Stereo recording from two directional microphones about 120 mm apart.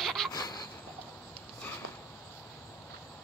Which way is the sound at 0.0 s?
5° left (ahead or behind).